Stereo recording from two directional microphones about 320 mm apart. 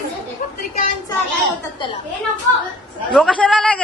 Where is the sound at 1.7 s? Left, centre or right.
Centre.